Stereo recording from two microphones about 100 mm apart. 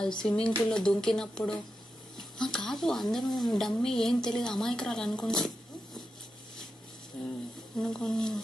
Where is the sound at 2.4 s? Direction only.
5° left (ahead or behind).